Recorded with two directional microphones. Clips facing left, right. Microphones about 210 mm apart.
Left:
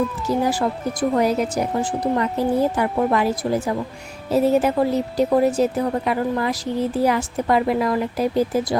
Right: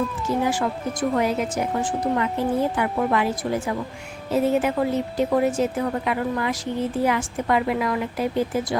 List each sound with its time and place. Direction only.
0.4 s a woman's voice: 35° left (ahead or behind)